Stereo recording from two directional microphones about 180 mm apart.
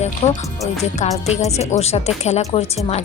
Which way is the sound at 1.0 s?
40° left (ahead or behind).